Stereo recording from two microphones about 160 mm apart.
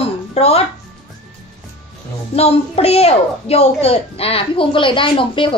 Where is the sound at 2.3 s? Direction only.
40° left (ahead or behind).